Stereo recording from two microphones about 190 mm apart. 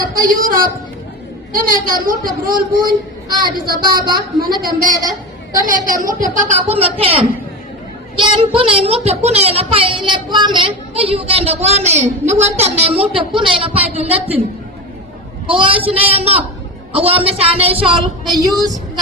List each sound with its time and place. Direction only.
0.1 s a woman's voice: 45° right (ahead or behind)
15.4 s speech: 25° right (ahead or behind)
17.9 s speech: 20° right (ahead or behind)